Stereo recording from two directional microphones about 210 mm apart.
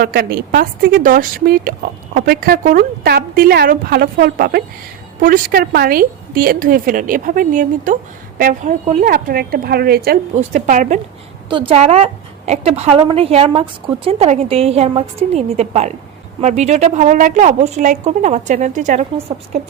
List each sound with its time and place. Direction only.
0.0 s a woman's voice: 45° right (ahead or behind)
11.4 s a woman's voice: 25° right (ahead or behind)